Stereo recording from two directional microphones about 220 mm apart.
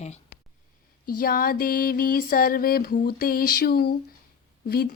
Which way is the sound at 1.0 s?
40° left (ahead or behind).